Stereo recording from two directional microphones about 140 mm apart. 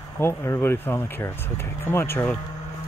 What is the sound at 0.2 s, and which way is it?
Speech, 20° left (ahead or behind).